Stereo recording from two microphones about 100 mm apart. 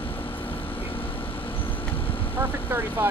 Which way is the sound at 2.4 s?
20° right (ahead or behind).